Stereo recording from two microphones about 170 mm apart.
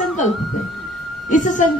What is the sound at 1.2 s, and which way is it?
Speech, 50° left (ahead or behind).